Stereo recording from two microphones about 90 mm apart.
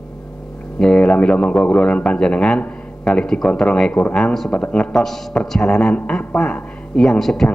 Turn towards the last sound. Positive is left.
turn(degrees=5)  # may be behind; listen again after turning